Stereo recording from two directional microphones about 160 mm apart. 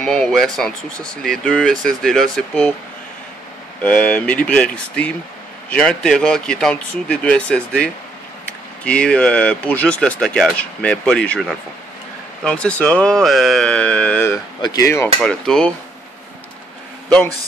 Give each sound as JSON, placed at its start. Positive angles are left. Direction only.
{"t": 0.0, "sound": "speech", "side_deg": 5}
{"t": 3.8, "sound": "speech", "side_deg": 10}
{"t": 14.6, "sound": "speech", "side_deg": 20}
{"t": 15.2, "sound": "speech", "side_deg": 5}